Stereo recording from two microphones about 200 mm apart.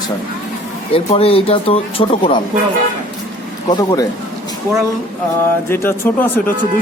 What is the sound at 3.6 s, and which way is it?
Speech, 20° left (ahead or behind).